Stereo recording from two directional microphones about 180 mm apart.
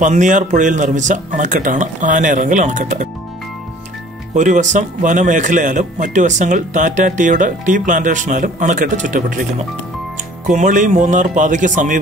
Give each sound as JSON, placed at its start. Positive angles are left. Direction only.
{"t": 0.0, "sound": "speech", "side_deg": -45}
{"t": 4.4, "sound": "speech", "side_deg": -45}